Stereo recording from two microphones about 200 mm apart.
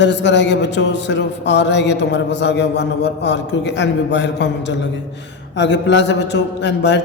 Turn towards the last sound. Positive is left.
turn(degrees=60)  # may be behind; listen again after turning